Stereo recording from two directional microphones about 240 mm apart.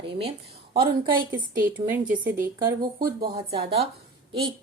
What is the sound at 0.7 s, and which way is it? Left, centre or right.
Speech, centre.